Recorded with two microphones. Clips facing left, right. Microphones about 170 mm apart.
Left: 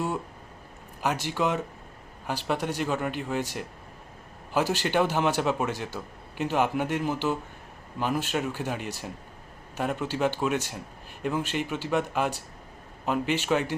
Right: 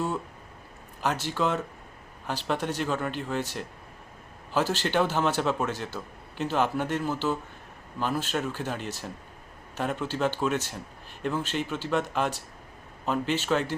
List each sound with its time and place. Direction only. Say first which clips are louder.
1.0 s a man's voice: even; 10° left (ahead or behind)